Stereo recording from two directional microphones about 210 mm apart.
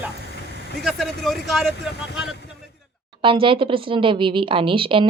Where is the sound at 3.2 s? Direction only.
25° right (ahead or behind).